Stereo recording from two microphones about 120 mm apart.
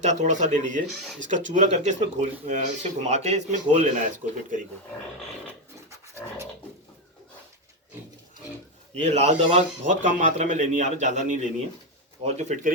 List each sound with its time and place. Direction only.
0.0 s speech: 75° right (ahead or behind)
9.0 s a man's voice: 65° right (ahead or behind); by 11.3 s 90° right
12.2 s speech: 65° right (ahead or behind)